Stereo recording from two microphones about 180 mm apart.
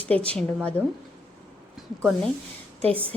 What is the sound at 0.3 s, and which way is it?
Speech, 5° left (ahead or behind).